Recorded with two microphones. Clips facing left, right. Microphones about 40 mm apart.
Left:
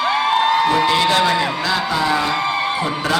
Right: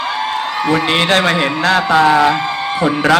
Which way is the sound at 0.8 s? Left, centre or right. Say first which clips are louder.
Right 2 dB; right.